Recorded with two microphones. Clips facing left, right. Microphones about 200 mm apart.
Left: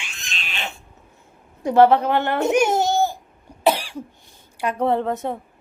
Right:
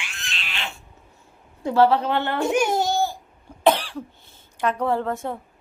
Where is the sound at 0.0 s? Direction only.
20° left (ahead or behind).